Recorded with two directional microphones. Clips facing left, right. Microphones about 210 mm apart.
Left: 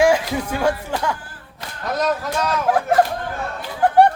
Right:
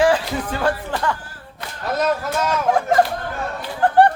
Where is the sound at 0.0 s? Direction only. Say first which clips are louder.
Left 1 dB; 10° left (ahead or behind).